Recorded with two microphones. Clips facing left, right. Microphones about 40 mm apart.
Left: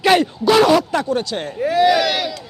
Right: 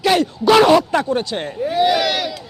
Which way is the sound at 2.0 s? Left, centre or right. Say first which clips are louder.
Even; centre.